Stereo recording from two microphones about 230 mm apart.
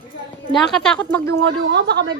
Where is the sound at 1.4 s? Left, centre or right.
Right.